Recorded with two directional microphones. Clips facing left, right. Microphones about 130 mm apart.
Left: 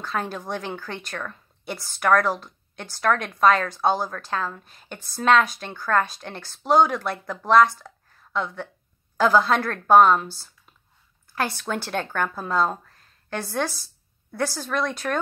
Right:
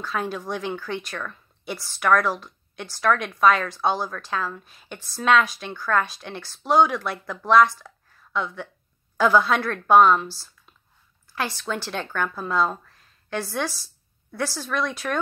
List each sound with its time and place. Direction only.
0.1 s speech: 45° left (ahead or behind)